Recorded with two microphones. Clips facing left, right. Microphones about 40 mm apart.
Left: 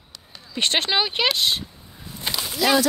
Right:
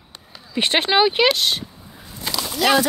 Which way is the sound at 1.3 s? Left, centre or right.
Centre.